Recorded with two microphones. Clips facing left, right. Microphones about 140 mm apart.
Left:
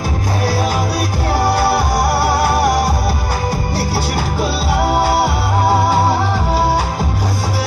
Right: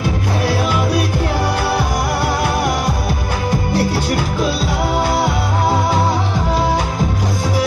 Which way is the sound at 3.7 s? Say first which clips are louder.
Right 2 dB; 40° left (ahead or behind).